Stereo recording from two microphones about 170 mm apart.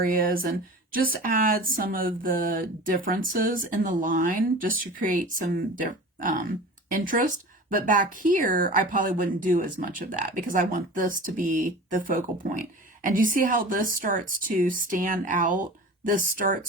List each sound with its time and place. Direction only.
0.0 s speech: 55° right (ahead or behind)